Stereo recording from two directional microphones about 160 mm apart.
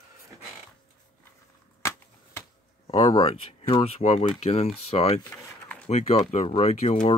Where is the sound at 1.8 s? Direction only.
15° left (ahead or behind).